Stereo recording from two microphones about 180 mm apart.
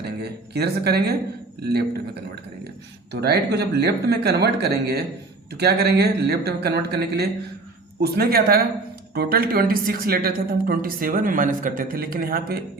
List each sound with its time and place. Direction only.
0.0 s speech: 65° right (ahead or behind)
3.1 s a woman's voice: 65° right (ahead or behind)